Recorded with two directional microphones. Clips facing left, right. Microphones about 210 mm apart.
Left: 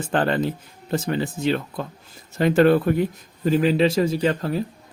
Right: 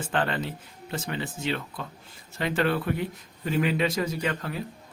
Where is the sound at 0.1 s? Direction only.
40° left (ahead or behind).